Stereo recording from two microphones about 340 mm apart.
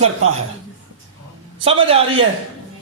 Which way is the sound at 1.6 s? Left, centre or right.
Centre.